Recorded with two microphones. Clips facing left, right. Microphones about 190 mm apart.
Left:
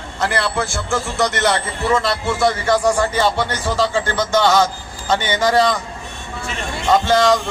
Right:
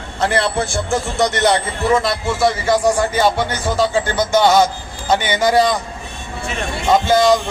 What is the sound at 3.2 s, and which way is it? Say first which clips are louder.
Speech: right 2 dB; 10° right (ahead or behind).